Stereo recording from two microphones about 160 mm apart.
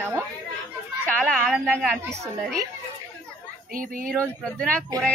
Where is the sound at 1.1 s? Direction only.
5° left (ahead or behind).